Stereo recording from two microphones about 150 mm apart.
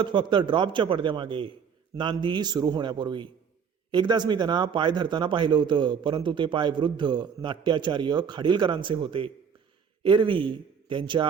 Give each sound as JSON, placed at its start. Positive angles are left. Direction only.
{"t": 0.0, "sound": "speech", "side_deg": -30}